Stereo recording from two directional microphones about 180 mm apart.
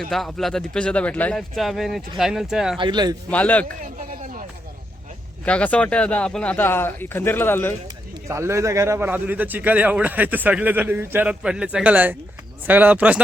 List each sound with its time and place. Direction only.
0.1 s speech: centre (ahead or behind)
2.7 s speech: 25° right (ahead or behind)
3.2 s speech: 5° left (ahead or behind)
3.8 s a sound: 50° right (ahead or behind)
5.5 s speech: 5° left (ahead or behind)
8.3 s a man's voice: 15° right (ahead or behind)